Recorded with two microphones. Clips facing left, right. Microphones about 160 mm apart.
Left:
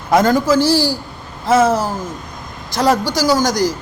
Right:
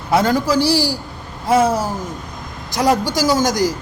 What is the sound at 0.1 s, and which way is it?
Speech, 45° left (ahead or behind).